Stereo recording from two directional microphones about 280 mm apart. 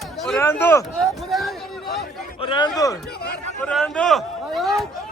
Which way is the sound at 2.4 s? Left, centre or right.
Centre.